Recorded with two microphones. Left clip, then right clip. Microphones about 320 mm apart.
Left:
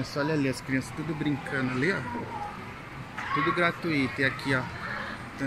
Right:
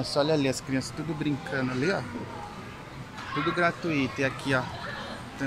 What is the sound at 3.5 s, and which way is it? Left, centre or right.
Speech, centre.